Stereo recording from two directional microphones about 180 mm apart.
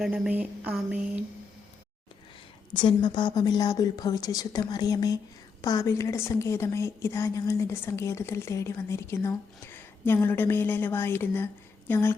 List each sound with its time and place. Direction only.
0.0 s a woman's voice: 5° right (ahead or behind)
2.7 s a woman's voice: 25° left (ahead or behind)